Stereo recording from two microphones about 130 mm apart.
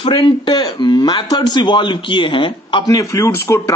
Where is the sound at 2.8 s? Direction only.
25° left (ahead or behind).